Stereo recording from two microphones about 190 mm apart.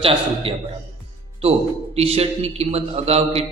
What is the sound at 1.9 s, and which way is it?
A man's voice, 35° right (ahead or behind).